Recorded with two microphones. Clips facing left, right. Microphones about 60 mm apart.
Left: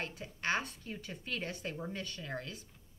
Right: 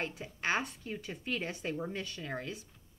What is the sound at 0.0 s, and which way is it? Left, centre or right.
A woman's voice, centre.